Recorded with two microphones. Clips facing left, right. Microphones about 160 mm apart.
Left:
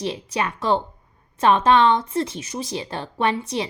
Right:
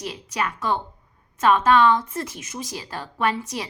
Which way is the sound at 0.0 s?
25° left (ahead or behind).